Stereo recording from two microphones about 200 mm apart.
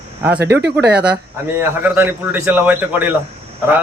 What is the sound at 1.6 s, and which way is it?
A man's voice, 10° right (ahead or behind).